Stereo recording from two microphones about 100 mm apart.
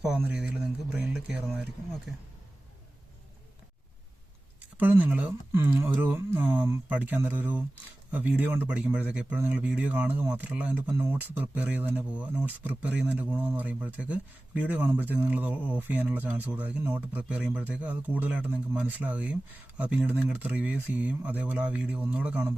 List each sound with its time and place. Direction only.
0.2 s speech: 15° right (ahead or behind)
4.8 s speech: 20° right (ahead or behind)